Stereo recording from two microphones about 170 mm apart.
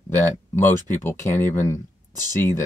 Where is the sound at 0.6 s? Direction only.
15° left (ahead or behind).